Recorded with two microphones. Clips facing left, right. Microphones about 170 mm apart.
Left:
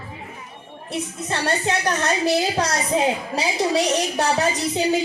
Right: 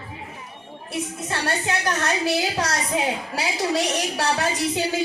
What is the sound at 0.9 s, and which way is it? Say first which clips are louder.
A woman's voice: left 2 dB; 25° left (ahead or behind).